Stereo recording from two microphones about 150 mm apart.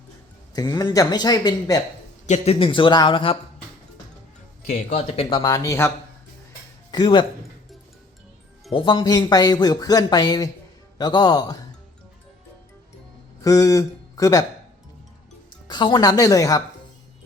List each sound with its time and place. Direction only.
0.5 s speech: 30° left (ahead or behind)
2.2 s a man's voice: 45° left (ahead or behind)
4.9 s speech: 45° left (ahead or behind)
5.4 s speech: 25° left (ahead or behind)
6.9 s a man's voice: 30° left (ahead or behind)
8.7 s speech: 30° left (ahead or behind)
13.4 s speech: 20° left (ahead or behind)
15.6 s speech: 30° left (ahead or behind)